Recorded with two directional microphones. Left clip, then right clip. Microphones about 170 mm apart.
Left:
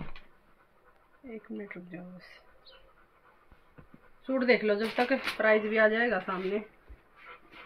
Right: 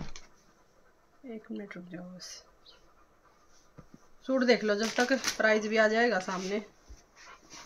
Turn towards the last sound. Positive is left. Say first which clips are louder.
# left 1 dB
turn(degrees=-25)  # may be behind; listen again after turning